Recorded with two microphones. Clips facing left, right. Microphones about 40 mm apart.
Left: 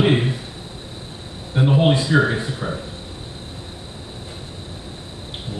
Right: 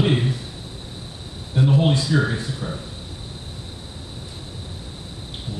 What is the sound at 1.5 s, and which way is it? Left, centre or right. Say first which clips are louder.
Speech: left 2 dB; left.